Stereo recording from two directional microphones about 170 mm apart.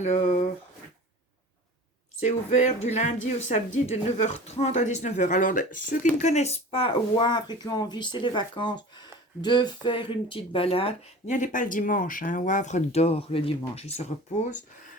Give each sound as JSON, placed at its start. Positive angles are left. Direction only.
{"t": 0.0, "sound": "speech", "side_deg": 45}
{"t": 2.2, "sound": "speech", "side_deg": 45}
{"t": 11.3, "sound": "speech", "side_deg": 45}